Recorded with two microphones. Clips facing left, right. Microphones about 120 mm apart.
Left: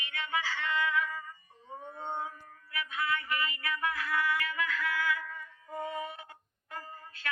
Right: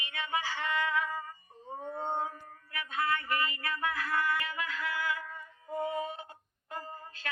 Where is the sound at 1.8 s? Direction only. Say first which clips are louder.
Right 4 dB; 35° right (ahead or behind).